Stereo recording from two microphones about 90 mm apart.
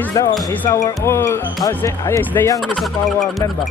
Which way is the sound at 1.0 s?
30° left (ahead or behind).